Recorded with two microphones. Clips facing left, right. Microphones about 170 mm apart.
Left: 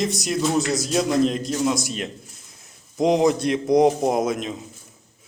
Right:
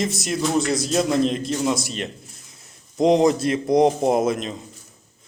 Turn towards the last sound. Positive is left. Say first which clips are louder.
# right 2 dB
turn(degrees=0)  # may be behind; listen again after turning